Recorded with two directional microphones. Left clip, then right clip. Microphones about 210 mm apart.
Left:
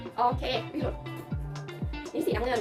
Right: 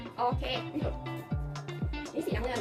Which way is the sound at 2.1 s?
15° left (ahead or behind).